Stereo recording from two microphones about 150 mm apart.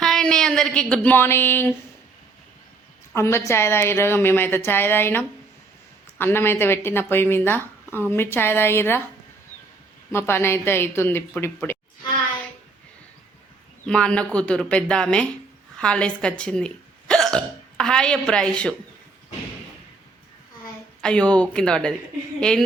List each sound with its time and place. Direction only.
0.0 s a sound: 5° left (ahead or behind)
1.0 s speech: 15° left (ahead or behind)
3.2 s speech: 20° left (ahead or behind)
10.1 s speech: 15° left (ahead or behind)
13.8 s speech: 5° left (ahead or behind)
21.0 s speech: 5° left (ahead or behind)